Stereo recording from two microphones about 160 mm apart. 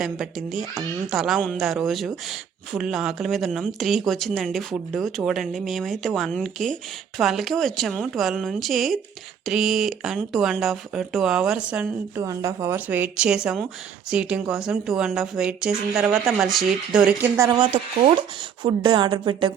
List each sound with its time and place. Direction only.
0.0 s speech: centre (ahead or behind)
12.2 s a woman's voice: 20° right (ahead or behind)